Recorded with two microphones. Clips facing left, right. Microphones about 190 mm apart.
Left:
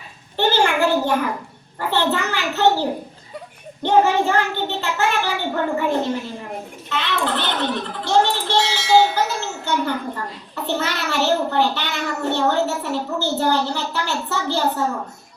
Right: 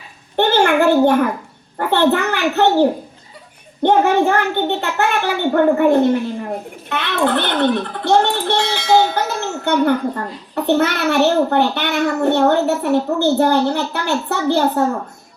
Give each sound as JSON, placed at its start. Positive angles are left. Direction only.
{"t": 0.3, "sound": "a sound", "side_deg": -60}
{"t": 1.8, "sound": "a child's voice", "side_deg": -55}
{"t": 3.8, "sound": "a child's voice", "side_deg": -60}